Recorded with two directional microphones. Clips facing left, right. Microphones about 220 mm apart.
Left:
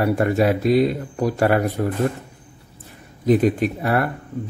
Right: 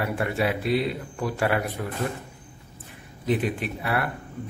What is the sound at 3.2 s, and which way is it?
Speech, 40° left (ahead or behind).